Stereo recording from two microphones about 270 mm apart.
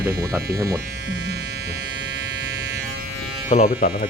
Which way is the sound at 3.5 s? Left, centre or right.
Left.